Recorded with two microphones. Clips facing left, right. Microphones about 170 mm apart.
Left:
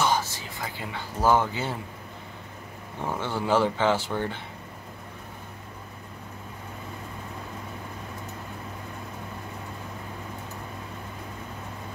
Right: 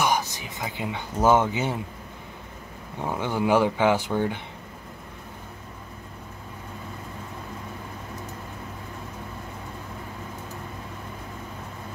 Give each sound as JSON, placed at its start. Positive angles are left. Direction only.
{"t": 0.0, "sound": "speech", "side_deg": -15}
{"t": 3.0, "sound": "speech", "side_deg": -15}